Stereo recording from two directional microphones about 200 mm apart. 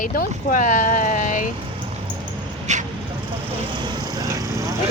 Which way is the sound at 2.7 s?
35° right (ahead or behind).